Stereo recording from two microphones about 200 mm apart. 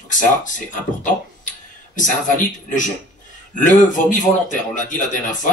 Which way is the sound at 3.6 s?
40° left (ahead or behind).